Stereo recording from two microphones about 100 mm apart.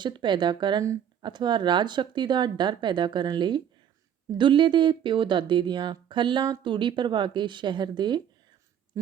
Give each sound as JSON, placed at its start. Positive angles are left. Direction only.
{"t": 0.0, "sound": "speech", "side_deg": -50}